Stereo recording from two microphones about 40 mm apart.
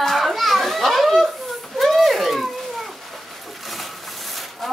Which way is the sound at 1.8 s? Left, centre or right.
Centre.